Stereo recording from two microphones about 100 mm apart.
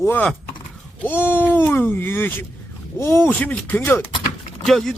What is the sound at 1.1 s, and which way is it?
Speech, 20° left (ahead or behind).